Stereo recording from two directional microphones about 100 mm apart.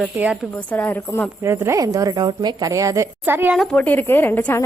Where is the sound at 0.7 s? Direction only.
20° left (ahead or behind).